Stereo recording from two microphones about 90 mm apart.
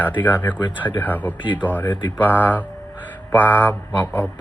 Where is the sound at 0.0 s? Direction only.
20° left (ahead or behind).